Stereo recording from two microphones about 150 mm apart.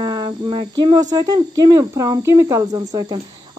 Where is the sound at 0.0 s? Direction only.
25° right (ahead or behind).